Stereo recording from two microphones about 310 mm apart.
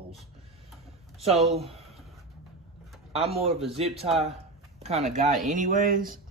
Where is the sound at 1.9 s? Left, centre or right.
Centre.